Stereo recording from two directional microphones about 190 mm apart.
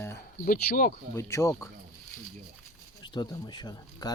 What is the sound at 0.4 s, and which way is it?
Speech, 50° left (ahead or behind).